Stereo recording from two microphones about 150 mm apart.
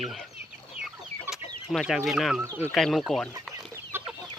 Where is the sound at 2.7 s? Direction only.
Centre (ahead or behind).